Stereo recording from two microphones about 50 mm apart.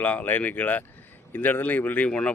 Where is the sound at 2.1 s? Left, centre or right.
Left.